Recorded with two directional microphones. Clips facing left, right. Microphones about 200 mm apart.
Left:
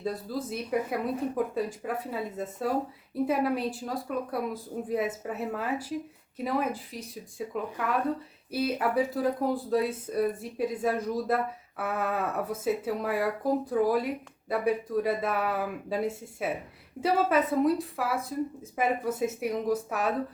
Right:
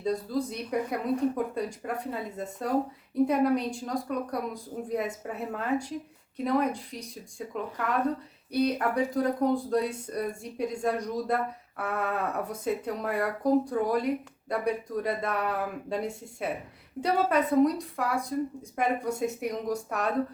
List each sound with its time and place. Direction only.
0.0 s speech: 5° left (ahead or behind)